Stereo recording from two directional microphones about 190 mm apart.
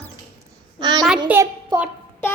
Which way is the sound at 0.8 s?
20° right (ahead or behind).